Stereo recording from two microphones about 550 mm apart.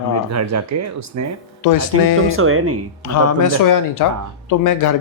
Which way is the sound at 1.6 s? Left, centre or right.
Left.